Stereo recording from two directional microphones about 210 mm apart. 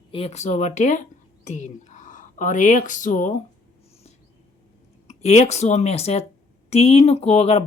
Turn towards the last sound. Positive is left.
turn(degrees=30)  # may be behind; listen again after turning